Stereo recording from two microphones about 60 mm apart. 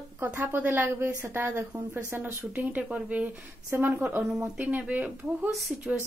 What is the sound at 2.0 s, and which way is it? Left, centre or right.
Speech, right.